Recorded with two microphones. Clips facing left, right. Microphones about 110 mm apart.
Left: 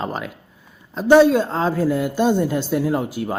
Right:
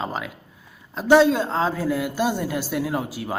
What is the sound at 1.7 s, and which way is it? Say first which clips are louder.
Speech: left 4 dB; 20° left (ahead or behind).